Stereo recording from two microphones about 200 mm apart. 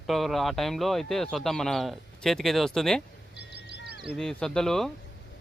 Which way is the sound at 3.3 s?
55° right (ahead or behind).